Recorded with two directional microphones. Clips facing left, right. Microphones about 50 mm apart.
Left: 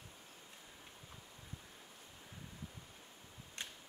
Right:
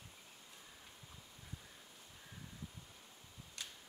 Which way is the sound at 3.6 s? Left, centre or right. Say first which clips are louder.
Left 3 dB; left.